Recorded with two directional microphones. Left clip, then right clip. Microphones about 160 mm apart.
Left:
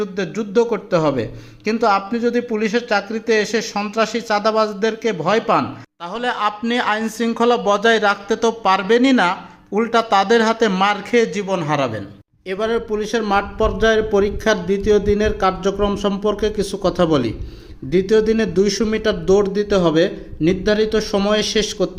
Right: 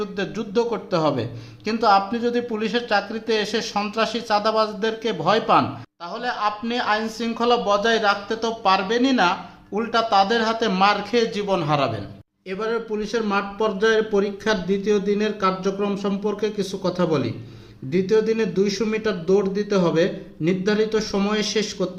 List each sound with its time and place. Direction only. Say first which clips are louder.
0.0 s a man's voice: left 4 dB; 15° left (ahead or behind)
6.1 s speech: left 4 dB; 25° left (ahead or behind)